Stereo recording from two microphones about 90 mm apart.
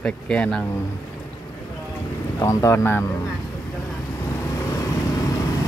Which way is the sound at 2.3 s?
35° left (ahead or behind).